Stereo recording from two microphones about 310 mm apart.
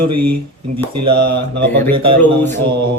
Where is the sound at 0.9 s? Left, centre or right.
Right.